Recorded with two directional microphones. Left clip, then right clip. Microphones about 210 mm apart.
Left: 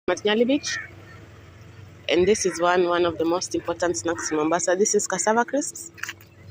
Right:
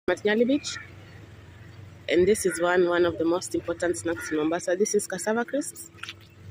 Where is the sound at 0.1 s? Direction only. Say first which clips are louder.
Left 2 dB; 10° right (ahead or behind).